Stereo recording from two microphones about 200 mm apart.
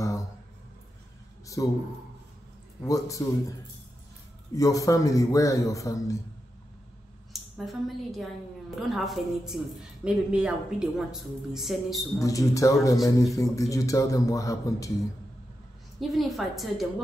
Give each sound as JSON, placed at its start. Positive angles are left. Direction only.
{"t": 1.4, "sound": "a sound", "side_deg": 15}
{"t": 2.8, "sound": "speech", "side_deg": 15}
{"t": 4.6, "sound": "speech", "side_deg": 15}
{"t": 7.5, "sound": "a woman's voice", "side_deg": 0}
{"t": 12.2, "sound": "speech", "side_deg": 15}
{"t": 13.0, "sound": "a woman's voice", "side_deg": 0}
{"t": 13.4, "sound": "speech", "side_deg": 15}
{"t": 16.0, "sound": "a woman's voice", "side_deg": 0}